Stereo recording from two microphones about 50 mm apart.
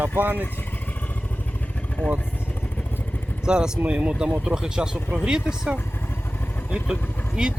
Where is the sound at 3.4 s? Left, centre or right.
Centre.